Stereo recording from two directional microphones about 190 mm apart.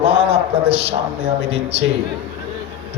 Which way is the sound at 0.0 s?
30° right (ahead or behind).